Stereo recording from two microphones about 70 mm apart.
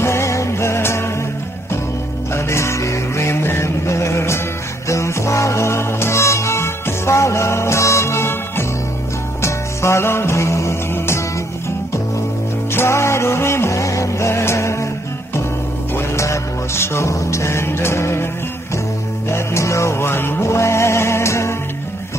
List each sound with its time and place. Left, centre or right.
0.0 s music: left
2.3 s music: left
12.7 s music: left
15.9 s music: left
19.2 s music: left